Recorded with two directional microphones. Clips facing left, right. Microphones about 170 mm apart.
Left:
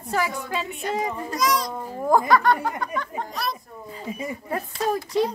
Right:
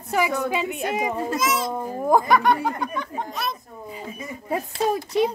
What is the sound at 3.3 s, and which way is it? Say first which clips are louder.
Speech: left 1 dB; centre (ahead or behind).